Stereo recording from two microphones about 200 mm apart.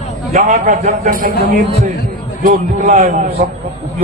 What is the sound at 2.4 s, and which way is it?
A man's voice, 40° right (ahead or behind).